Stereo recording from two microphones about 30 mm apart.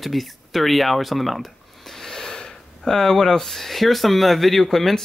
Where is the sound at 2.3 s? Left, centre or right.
Left.